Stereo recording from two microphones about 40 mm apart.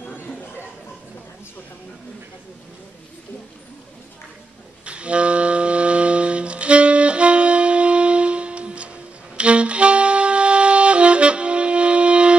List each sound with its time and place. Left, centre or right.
4.8 s music: right